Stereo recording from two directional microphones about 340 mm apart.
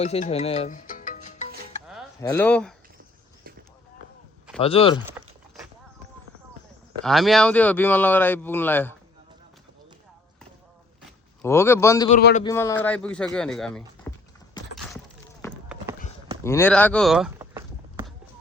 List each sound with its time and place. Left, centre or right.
0.0 s speech: centre
2.2 s speech: centre
4.6 s a man's voice: centre
7.0 s speech: centre
11.4 s a man's voice: centre
12.1 s speech: left
12.5 s speech: centre
15.4 s a sound: centre